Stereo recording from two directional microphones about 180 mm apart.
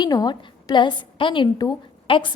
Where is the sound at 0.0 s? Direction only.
20° left (ahead or behind).